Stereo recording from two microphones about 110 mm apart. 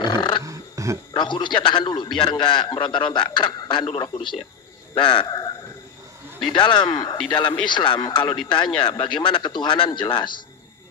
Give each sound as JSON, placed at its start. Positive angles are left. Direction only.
{"t": 0.0, "sound": "wild animals", "side_deg": 45}
{"t": 0.4, "sound": "a sound", "side_deg": -30}
{"t": 1.1, "sound": "a man's voice", "side_deg": 45}
{"t": 6.5, "sound": "a man's voice", "side_deg": 45}